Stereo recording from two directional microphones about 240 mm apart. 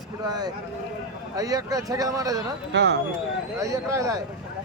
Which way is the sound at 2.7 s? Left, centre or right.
Right.